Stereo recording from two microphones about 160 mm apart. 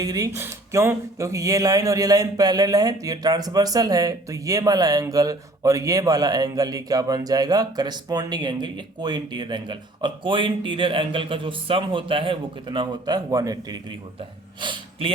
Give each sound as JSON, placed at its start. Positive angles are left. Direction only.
{"t": 0.0, "sound": "speech", "side_deg": -20}
{"t": 14.2, "sound": "speech", "side_deg": -30}